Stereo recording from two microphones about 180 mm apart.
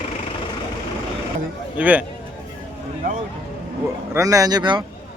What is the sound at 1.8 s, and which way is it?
Speech, 10° right (ahead or behind).